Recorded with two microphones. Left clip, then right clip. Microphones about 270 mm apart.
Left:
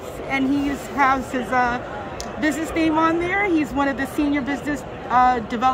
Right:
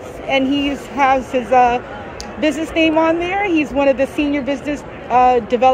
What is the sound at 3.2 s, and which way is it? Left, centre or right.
A woman's voice, left.